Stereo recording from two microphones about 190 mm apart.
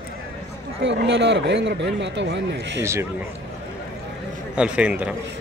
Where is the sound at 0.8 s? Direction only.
70° right (ahead or behind).